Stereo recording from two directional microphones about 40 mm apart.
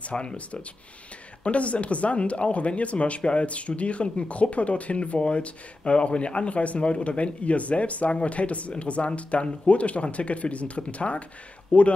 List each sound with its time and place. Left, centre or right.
0.0 s speech: left